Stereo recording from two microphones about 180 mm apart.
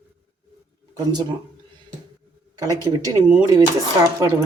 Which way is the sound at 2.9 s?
15° right (ahead or behind).